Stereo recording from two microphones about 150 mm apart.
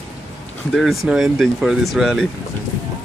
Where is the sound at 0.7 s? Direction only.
Centre (ahead or behind).